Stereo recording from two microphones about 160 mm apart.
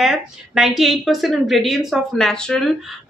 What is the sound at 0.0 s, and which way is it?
Speech, centre (ahead or behind).